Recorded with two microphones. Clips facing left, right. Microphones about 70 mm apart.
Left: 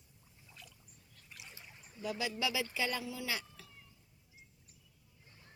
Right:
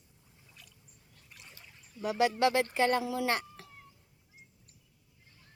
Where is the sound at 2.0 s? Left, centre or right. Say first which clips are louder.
Right 10 dB; right.